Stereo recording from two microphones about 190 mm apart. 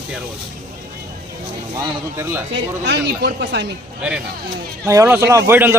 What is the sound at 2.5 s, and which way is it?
A woman's voice, 65° right (ahead or behind).